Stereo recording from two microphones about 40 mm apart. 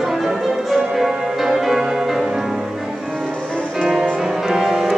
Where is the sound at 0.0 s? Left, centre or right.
Centre.